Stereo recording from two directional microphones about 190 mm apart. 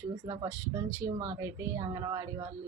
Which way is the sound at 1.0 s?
25° right (ahead or behind).